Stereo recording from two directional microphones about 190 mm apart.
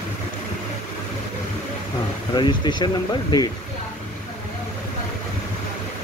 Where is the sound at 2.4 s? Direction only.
25° left (ahead or behind).